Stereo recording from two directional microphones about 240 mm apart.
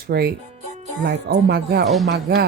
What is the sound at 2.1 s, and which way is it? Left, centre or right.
Speech, right.